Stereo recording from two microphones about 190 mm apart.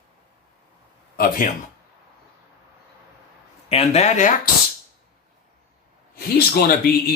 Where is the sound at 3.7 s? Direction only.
35° left (ahead or behind).